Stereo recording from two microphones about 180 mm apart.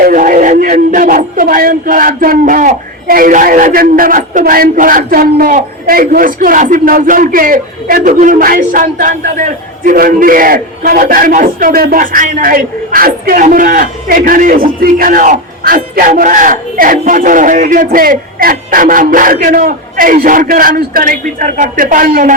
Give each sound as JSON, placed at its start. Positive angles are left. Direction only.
{"t": 0.0, "sound": "speech", "side_deg": -50}